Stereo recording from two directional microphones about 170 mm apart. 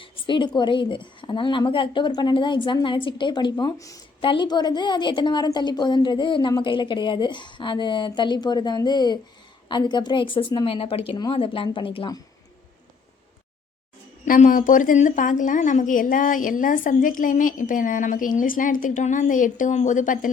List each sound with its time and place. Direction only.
0.0 s a woman's voice: 30° left (ahead or behind)
14.3 s a woman's voice: 50° left (ahead or behind)